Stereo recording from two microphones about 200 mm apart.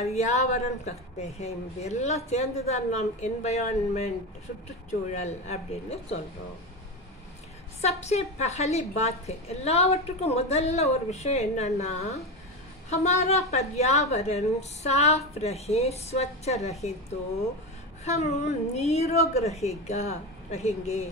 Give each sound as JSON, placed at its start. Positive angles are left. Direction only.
{"t": 0.0, "sound": "a woman's voice", "side_deg": 35}
{"t": 5.1, "sound": "a woman's voice", "side_deg": 35}
{"t": 8.0, "sound": "a woman's voice", "side_deg": 35}
{"t": 18.0, "sound": "a woman's voice", "side_deg": 35}